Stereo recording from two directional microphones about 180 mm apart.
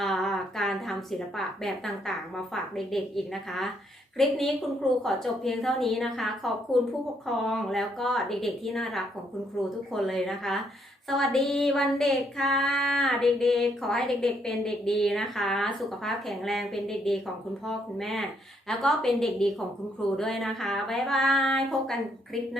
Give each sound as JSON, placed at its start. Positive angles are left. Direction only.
{"t": 0.0, "sound": "a sound", "side_deg": 0}
{"t": 1.4, "sound": "female singing", "side_deg": 0}
{"t": 4.2, "sound": "female singing", "side_deg": 0}